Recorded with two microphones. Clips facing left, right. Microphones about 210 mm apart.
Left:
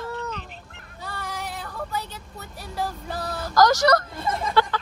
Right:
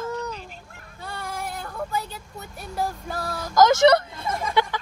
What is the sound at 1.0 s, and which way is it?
Child singing, centre (ahead or behind).